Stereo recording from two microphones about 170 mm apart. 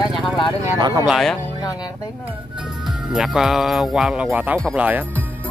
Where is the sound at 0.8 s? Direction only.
25° right (ahead or behind).